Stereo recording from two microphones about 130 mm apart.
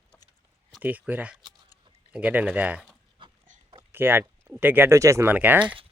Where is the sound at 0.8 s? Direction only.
10° right (ahead or behind).